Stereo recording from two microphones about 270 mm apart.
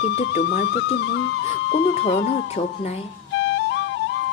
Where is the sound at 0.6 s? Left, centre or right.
Left.